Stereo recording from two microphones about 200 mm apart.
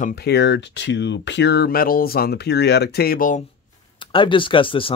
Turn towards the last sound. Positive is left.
turn(degrees=25)  # may be behind; listen again after turning